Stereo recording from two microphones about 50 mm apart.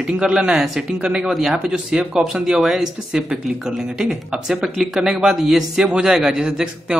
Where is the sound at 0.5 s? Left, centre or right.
Centre.